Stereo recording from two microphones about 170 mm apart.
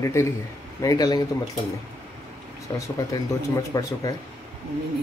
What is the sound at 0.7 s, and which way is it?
Cutlery, 20° left (ahead or behind).